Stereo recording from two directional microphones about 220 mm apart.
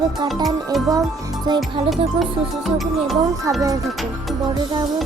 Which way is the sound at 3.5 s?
15° right (ahead or behind).